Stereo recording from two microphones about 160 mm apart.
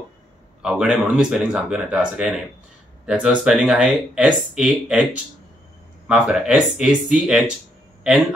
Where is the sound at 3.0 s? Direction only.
5° right (ahead or behind).